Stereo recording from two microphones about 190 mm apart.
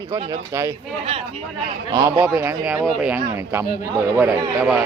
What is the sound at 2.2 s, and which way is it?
A man's voice, 10° right (ahead or behind).